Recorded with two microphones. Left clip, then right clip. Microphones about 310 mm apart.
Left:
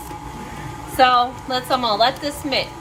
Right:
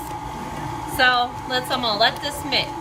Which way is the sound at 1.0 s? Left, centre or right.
Centre.